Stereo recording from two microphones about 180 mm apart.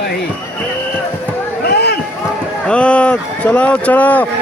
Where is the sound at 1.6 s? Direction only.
65° left (ahead or behind).